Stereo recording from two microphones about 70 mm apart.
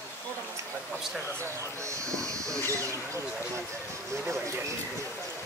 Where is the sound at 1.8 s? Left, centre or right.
Right.